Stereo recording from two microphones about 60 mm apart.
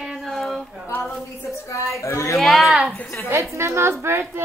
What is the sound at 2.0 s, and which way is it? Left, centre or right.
Speech, left.